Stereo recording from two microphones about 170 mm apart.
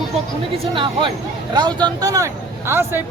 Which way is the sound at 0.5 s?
30° right (ahead or behind).